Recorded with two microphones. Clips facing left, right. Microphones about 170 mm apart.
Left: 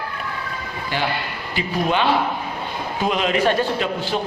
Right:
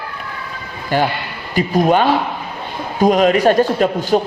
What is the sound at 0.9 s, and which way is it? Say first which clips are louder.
A man's voice: right 7 dB; 45° right (ahead or behind).